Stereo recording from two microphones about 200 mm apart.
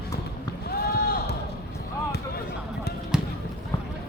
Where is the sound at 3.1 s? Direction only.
5° right (ahead or behind).